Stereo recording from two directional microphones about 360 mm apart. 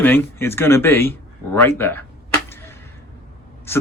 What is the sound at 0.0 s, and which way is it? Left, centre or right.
Speech, centre.